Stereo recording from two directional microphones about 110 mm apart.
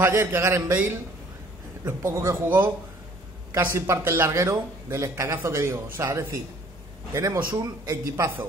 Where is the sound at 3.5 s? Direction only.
20° right (ahead or behind).